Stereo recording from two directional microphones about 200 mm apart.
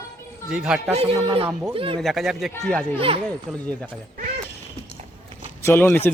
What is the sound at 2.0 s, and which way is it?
Speech, centre (ahead or behind).